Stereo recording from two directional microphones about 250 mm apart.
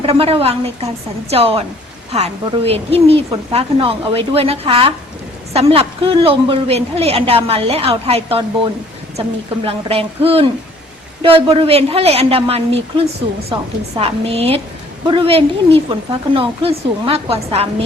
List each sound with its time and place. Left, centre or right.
0.0 s a woman's voice: right
9.6 s a woman's voice: right
14.0 s a woman's voice: right